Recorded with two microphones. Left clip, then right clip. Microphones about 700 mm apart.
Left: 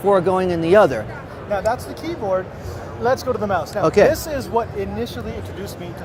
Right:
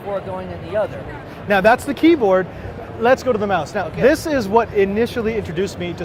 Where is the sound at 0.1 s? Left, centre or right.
Left.